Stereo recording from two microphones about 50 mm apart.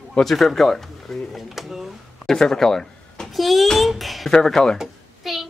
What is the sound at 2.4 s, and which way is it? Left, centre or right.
Speech, centre.